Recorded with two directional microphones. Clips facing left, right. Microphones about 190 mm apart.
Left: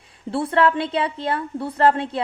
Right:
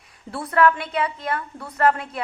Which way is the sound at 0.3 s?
30° left (ahead or behind).